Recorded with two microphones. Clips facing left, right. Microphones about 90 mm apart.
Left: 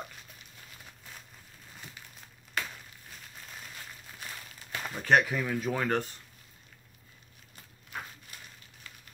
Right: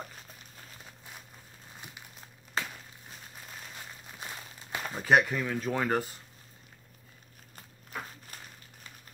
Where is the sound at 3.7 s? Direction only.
20° right (ahead or behind).